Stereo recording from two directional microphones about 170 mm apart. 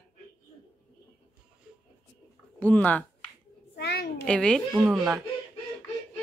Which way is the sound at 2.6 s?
10° left (ahead or behind).